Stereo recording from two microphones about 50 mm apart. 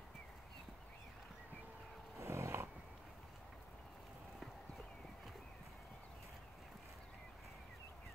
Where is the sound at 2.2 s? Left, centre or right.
Right.